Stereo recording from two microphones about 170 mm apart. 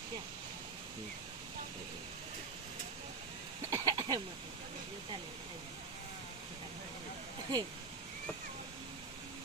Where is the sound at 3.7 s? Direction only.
25° right (ahead or behind).